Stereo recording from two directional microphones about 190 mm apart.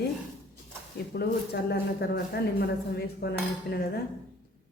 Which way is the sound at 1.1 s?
60° left (ahead or behind).